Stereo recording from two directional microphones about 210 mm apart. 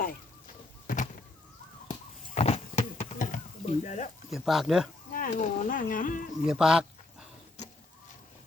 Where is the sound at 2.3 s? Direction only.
30° left (ahead or behind).